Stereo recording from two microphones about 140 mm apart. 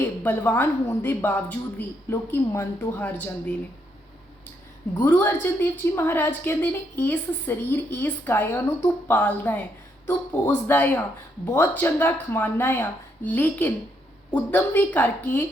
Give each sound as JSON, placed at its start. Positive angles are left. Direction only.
{"t": 0.2, "sound": "a woman's voice", "side_deg": 15}
{"t": 5.0, "sound": "a woman's voice", "side_deg": 15}